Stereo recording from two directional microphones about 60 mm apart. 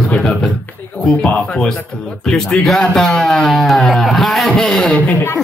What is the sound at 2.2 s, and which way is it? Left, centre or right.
Speech, centre.